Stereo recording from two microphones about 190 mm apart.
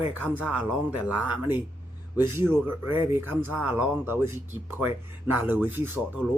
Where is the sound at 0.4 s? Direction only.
5° right (ahead or behind).